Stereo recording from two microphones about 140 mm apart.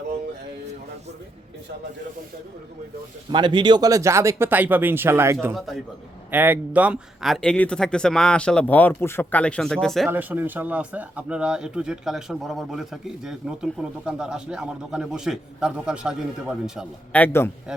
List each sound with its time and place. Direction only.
3.3 s speech: 35° right (ahead or behind); by 5.5 s 20° right (ahead or behind)
5.5 s speech: centre (ahead or behind)
6.3 s speech: 10° right (ahead or behind)
10.1 s speech: 15° right (ahead or behind)
17.1 s a man's voice: 10° left (ahead or behind)